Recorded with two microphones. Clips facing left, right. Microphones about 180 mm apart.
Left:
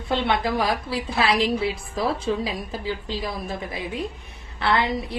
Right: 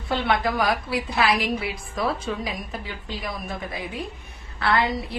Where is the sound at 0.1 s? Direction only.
25° left (ahead or behind).